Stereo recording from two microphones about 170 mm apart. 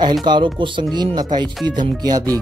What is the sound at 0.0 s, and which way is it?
Speech, 25° right (ahead or behind).